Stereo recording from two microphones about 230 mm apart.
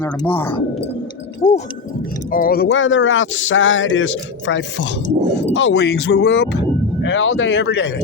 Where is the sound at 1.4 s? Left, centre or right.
Left.